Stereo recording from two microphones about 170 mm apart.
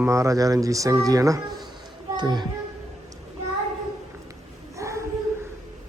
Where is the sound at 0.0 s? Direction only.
15° right (ahead or behind).